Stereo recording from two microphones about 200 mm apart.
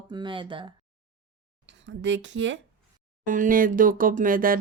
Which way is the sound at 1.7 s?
65° right (ahead or behind).